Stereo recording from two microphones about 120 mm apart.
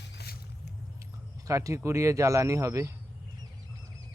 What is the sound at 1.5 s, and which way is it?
Speech, 25° right (ahead or behind).